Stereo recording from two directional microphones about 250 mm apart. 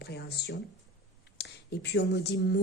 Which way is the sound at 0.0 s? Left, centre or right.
Left.